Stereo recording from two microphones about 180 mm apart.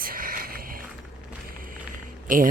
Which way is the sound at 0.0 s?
55° right (ahead or behind).